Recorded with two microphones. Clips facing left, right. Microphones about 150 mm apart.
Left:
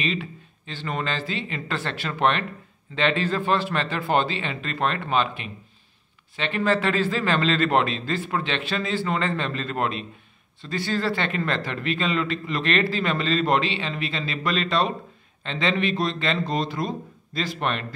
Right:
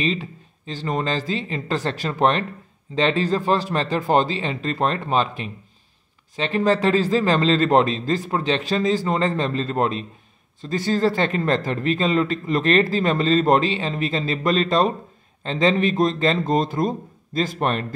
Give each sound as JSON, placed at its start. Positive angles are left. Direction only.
{"t": 0.0, "sound": "a man's voice", "side_deg": -35}